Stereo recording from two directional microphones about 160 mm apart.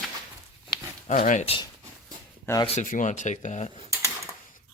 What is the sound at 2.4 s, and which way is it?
Speech, 20° left (ahead or behind).